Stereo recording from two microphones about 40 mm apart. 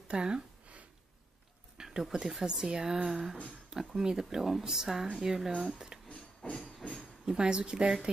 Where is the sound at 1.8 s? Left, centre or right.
Centre.